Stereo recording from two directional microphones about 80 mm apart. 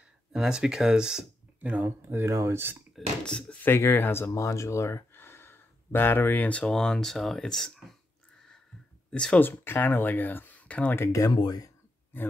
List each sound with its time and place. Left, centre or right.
0.3 s speech: centre
1.9 s speech: right
3.3 s speech: centre
3.6 s speech: left
6.6 s speech: centre
9.1 s speech: centre
9.4 s speech: left
11.0 s speech: left
11.3 s speech: left